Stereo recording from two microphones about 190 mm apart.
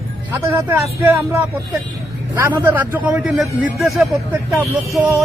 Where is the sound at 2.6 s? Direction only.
10° right (ahead or behind).